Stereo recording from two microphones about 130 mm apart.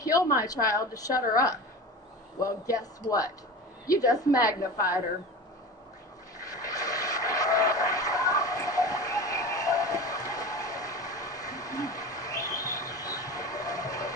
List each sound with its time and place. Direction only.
0.0 s a woman's voice: 25° left (ahead or behind)
6.4 s vehicle: 25° left (ahead or behind)